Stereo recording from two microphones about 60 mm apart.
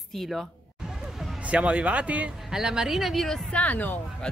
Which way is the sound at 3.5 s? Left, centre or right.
Left.